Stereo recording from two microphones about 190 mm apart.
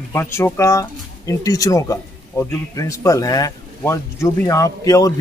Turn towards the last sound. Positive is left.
turn(degrees=20)  # may be behind; listen again after turning